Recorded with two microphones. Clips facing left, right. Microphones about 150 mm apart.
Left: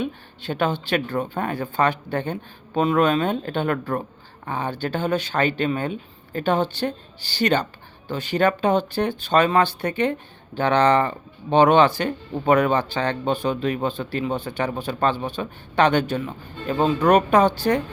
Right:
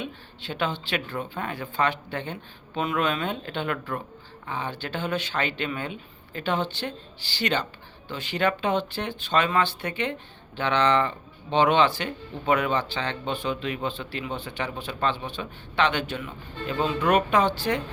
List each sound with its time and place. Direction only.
0.0 s speech: 45° left (ahead or behind)